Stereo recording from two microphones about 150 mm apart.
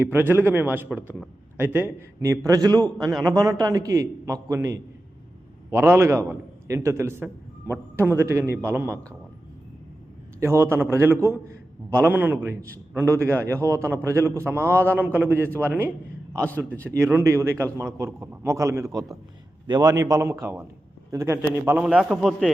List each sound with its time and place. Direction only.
0.0 s a man's voice: 15° right (ahead or behind)
10.4 s a man's voice: 15° right (ahead or behind)
14.6 s a man's voice: 15° left (ahead or behind)
14.9 s a man's voice: 10° right (ahead or behind)
16.3 s a man's voice: 10° left (ahead or behind)
16.9 s a man's voice: 15° right (ahead or behind); by 22.5 s centre (ahead or behind)